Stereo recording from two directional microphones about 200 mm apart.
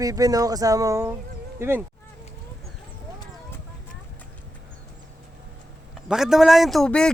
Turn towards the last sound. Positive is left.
turn(degrees=5)  # may be behind; listen again after turning